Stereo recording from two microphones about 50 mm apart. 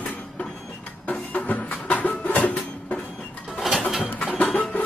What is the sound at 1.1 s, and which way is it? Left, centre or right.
Music, left.